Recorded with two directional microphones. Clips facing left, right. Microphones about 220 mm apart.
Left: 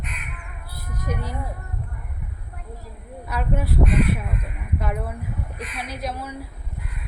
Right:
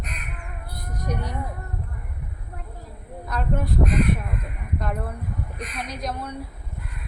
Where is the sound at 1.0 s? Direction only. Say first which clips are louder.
Even; 5° left (ahead or behind).